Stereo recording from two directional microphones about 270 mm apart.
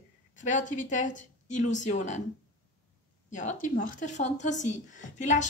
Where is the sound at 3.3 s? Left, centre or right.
Left.